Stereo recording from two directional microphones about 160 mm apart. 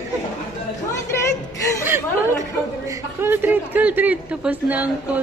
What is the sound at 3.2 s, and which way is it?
Speech, 15° right (ahead or behind).